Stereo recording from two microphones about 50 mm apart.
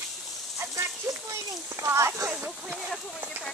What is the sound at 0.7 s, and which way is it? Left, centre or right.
Children playing, right.